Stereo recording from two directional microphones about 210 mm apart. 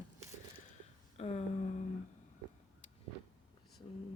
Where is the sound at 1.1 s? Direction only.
30° left (ahead or behind).